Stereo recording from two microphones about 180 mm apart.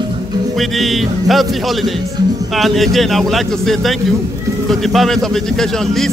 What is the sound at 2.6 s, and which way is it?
A man's voice, centre (ahead or behind).